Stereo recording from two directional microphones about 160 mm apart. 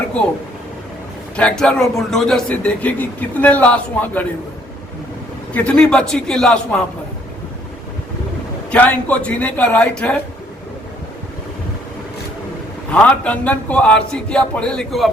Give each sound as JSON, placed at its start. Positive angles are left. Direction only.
{"t": 1.4, "sound": "speech", "side_deg": 5}
{"t": 5.5, "sound": "a man's voice", "side_deg": 5}
{"t": 8.7, "sound": "speech", "side_deg": 10}
{"t": 12.9, "sound": "speech", "side_deg": 10}